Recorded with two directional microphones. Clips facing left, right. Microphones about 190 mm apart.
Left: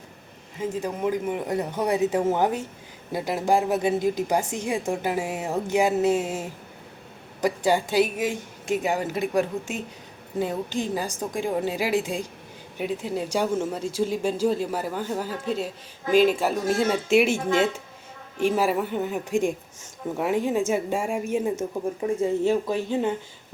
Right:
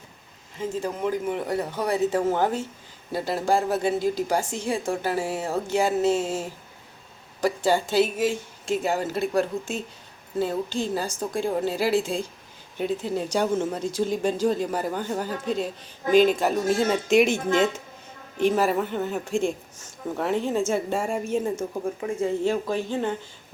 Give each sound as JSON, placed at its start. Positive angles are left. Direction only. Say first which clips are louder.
{"t": 0.8, "sound": "speech", "louder": "even", "side_deg": 10}
{"t": 22.6, "sound": "speech", "louder": "left 1 dB", "side_deg": 5}